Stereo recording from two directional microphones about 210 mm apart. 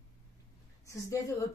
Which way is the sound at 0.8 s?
15° left (ahead or behind).